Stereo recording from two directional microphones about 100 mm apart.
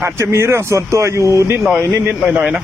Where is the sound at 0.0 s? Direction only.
30° right (ahead or behind).